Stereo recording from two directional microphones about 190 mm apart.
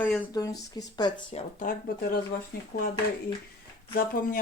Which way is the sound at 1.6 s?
50° left (ahead or behind).